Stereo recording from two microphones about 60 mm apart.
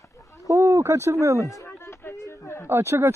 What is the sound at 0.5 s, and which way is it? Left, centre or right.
Speech, right.